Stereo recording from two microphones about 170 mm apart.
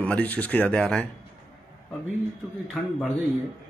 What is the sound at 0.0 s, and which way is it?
Speech, 10° left (ahead or behind).